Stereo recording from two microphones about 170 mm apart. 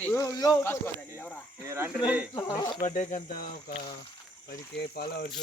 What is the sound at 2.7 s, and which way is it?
Speech, 50° left (ahead or behind).